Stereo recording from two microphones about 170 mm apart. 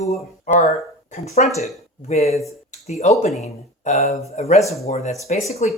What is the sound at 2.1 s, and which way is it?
Speech, 40° left (ahead or behind).